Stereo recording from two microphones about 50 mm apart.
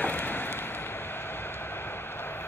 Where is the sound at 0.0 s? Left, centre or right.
Left.